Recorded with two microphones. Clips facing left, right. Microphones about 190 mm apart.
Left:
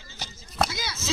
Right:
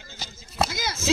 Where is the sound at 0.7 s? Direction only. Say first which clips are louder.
Right 6 dB; 50° right (ahead or behind).